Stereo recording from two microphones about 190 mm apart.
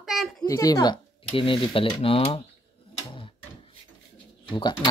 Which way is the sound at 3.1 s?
30° left (ahead or behind).